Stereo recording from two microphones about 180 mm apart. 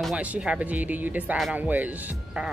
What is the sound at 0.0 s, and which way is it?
Speech, 5° right (ahead or behind).